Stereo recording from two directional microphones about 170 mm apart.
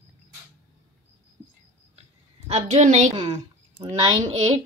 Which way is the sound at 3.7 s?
20° right (ahead or behind).